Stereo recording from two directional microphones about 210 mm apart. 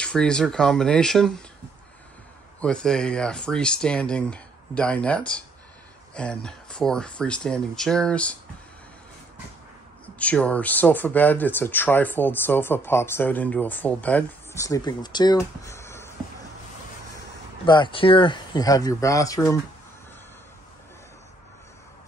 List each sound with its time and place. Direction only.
0.0 s speech: 5° left (ahead or behind)
2.6 s speech: 5° left (ahead or behind)
10.1 s speech: 5° left (ahead or behind)
17.6 s speech: 20° left (ahead or behind)